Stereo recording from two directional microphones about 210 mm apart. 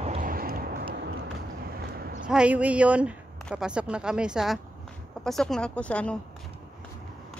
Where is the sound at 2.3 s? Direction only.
5° right (ahead or behind).